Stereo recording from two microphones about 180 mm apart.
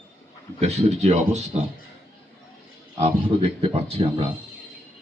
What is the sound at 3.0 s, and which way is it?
Speech, 35° right (ahead or behind).